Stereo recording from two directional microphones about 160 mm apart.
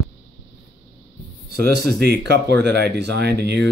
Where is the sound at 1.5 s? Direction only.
85° right.